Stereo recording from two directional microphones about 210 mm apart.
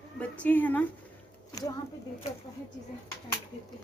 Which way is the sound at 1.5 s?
15° left (ahead or behind).